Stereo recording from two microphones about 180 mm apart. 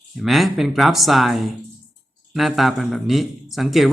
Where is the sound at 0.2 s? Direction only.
Centre (ahead or behind).